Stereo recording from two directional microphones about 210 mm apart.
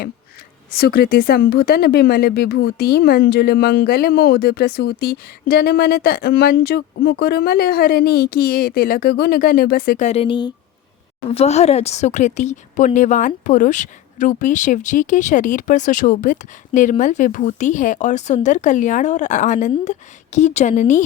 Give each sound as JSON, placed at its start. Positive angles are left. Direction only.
{"t": 0.7, "sound": "speech", "side_deg": 50}
{"t": 10.1, "sound": "speech", "side_deg": 25}